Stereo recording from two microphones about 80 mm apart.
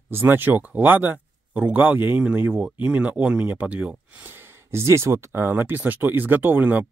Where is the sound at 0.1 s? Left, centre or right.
Right.